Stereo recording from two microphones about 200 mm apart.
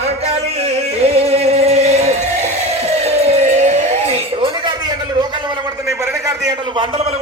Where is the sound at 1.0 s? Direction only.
30° right (ahead or behind).